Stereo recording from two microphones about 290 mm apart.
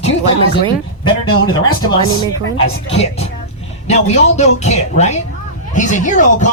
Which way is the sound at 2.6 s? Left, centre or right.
Left.